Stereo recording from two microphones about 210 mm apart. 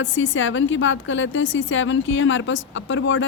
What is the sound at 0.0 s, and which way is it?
A woman's voice, 65° left (ahead or behind).